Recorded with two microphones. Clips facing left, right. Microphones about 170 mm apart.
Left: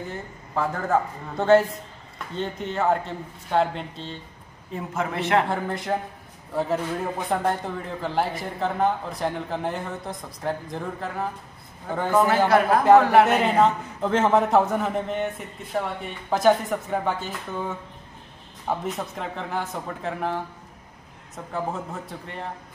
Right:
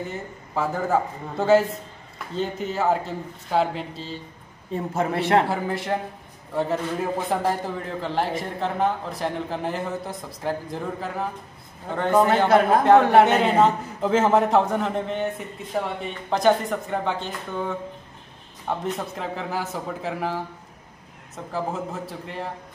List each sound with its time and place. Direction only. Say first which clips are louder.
0.1 s a man's voice: even; 5° right (ahead or behind)
4.9 s a man's voice: right 2 dB; 35° right (ahead or behind)
5.5 s a man's voice: right 1 dB; centre (ahead or behind)
12.1 s a man's voice: right 2 dB; 20° right (ahead or behind)
13.2 s a man's voice: right 1 dB; centre (ahead or behind)
21.5 s a man's voice: right 1 dB; centre (ahead or behind)